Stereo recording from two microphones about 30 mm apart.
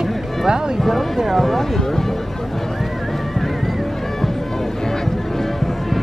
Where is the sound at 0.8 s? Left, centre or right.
Centre.